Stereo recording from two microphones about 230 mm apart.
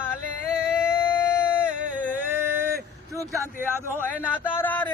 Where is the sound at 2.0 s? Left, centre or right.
Centre.